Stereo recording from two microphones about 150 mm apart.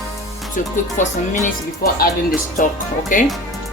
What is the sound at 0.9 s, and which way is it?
Speech, 70° left (ahead or behind).